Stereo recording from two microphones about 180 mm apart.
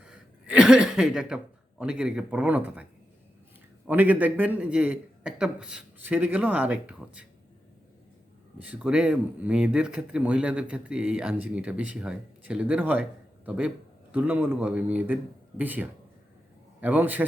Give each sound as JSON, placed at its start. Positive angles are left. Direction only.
{"t": 0.0, "sound": "speech", "side_deg": -5}
{"t": 3.8, "sound": "speech", "side_deg": -10}
{"t": 8.5, "sound": "speech", "side_deg": -10}